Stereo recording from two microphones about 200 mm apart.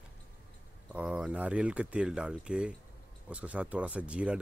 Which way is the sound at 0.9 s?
5° right (ahead or behind).